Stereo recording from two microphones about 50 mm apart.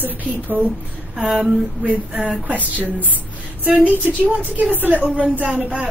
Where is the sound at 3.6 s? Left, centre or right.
Right.